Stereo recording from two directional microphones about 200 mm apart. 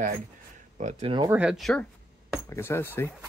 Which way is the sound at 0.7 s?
35° right (ahead or behind).